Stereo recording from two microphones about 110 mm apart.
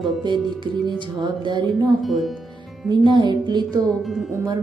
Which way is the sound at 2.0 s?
Centre (ahead or behind).